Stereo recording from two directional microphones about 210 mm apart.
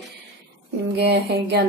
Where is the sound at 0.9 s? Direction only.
50° right (ahead or behind).